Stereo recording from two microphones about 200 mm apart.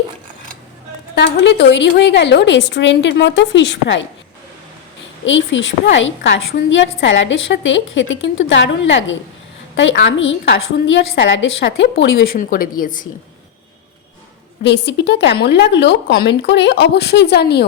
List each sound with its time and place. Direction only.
1.1 s a woman's voice: 60° left (ahead or behind)
5.2 s a woman's voice: 70° left (ahead or behind)
12.4 s a woman's voice: 45° left (ahead or behind)
14.6 s a woman's voice: 60° left (ahead or behind)